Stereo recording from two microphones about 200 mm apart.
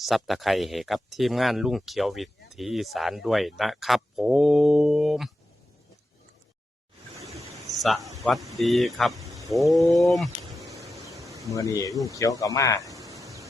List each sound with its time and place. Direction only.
0.0 s speech: centre (ahead or behind)
7.8 s speech: centre (ahead or behind)
10.4 s a sound: 15° right (ahead or behind)
10.9 s bee: 15° right (ahead or behind)
11.5 s speech: 15° left (ahead or behind)
12.8 s a sound: 15° right (ahead or behind)